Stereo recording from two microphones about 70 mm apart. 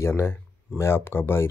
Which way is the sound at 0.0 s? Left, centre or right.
Left.